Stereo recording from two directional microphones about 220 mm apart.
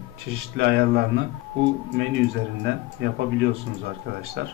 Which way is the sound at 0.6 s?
50° right (ahead or behind).